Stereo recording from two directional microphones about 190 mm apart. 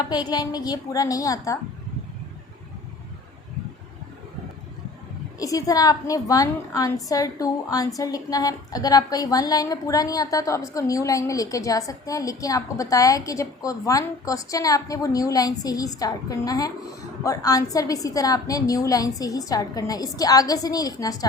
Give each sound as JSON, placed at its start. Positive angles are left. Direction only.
{"t": 0.1, "sound": "a woman's voice", "side_deg": 20}
{"t": 5.4, "sound": "a woman's voice", "side_deg": 20}